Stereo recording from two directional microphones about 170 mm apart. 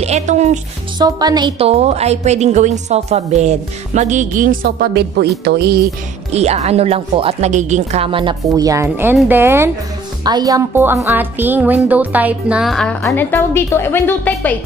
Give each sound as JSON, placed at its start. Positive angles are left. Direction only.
{"t": 0.0, "sound": "a woman's voice", "side_deg": -40}
{"t": 0.9, "sound": "speech", "side_deg": -25}
{"t": 1.7, "sound": "a woman's voice", "side_deg": -40}
{"t": 6.3, "sound": "a woman's voice", "side_deg": -40}
{"t": 8.5, "sound": "speech", "side_deg": -20}
{"t": 13.0, "sound": "speech", "side_deg": 15}